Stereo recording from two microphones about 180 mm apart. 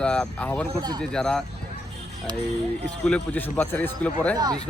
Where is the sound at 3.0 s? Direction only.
5° left (ahead or behind).